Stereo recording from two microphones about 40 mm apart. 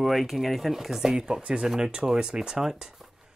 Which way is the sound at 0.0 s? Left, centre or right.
Centre.